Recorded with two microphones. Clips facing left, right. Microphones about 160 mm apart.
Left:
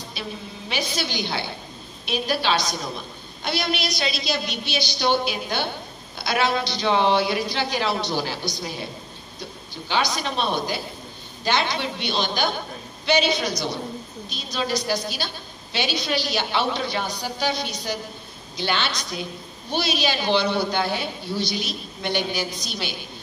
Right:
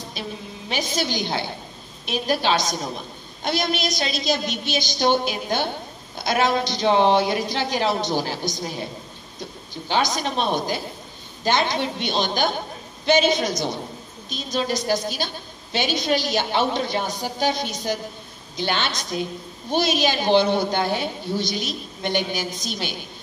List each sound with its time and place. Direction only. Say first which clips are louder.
0.7 s a woman's voice: right 3 dB; 45° right (ahead or behind)
9.8 s a woman's voice: right 2 dB; 45° right (ahead or behind)